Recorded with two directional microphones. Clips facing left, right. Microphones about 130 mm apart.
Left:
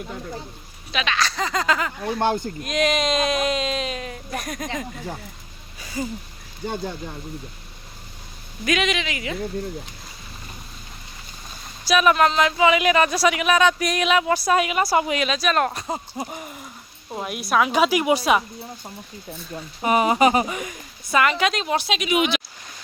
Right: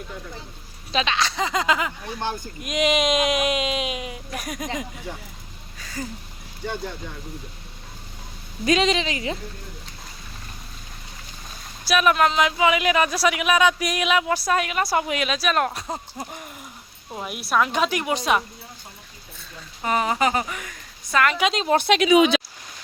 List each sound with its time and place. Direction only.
0.9 s speech: 30° right (ahead or behind)
2.1 s speech: 60° left (ahead or behind)
2.6 s speech: 15° right (ahead or behind)
5.8 s a sound: 15° left (ahead or behind)
8.6 s speech: 30° right (ahead or behind)
11.9 s speech: centre (ahead or behind)
19.5 s speech: 15° left (ahead or behind)
21.1 s speech: 5° left (ahead or behind)
21.5 s speech: 30° right (ahead or behind)
21.8 s speech: 60° right (ahead or behind)